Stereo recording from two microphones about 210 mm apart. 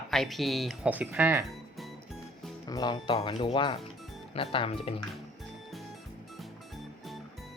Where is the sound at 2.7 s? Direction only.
20° left (ahead or behind).